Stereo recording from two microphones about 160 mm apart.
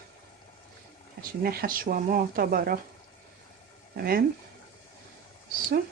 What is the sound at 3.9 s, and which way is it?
Speech, 70° right (ahead or behind).